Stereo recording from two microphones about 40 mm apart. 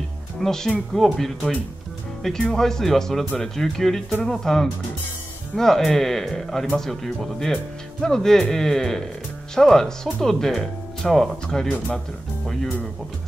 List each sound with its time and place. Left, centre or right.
0.4 s speech: centre
2.5 s speech: centre
11.4 s speech: centre